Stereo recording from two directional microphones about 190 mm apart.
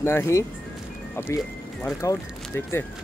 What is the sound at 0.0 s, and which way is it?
Speech, 15° left (ahead or behind).